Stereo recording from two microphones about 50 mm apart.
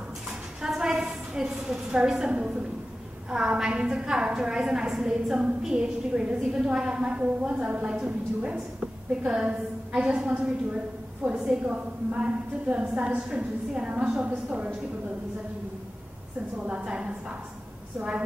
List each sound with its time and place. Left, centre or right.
0.6 s a sound: centre
3.3 s a woman's voice: centre
11.7 s a woman's voice: right
16.5 s a woman's voice: centre